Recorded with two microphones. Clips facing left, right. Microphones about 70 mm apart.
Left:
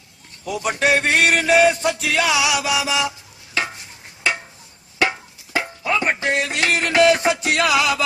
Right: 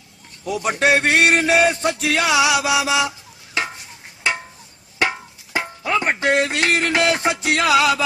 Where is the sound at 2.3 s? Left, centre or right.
Right.